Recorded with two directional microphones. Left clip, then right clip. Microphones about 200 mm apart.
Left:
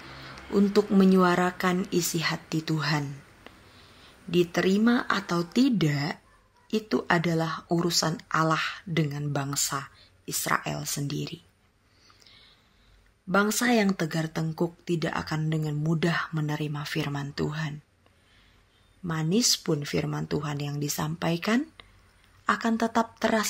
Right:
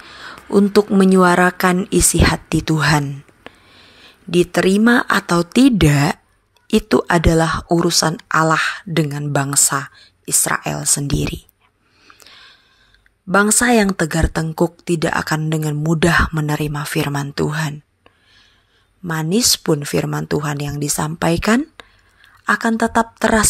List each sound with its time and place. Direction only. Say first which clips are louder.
0.1 s speech: right 12 dB; 35° right (ahead or behind)
12.1 s a sound: right 12 dB; 40° right (ahead or behind)
13.3 s speech: right 10 dB; 35° right (ahead or behind)